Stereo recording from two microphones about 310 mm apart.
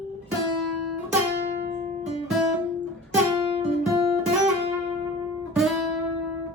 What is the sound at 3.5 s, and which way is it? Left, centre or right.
Guitar, centre.